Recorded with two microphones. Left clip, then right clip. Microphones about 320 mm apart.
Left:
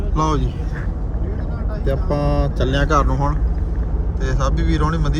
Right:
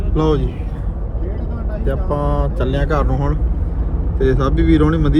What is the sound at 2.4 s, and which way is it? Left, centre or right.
Speech, left.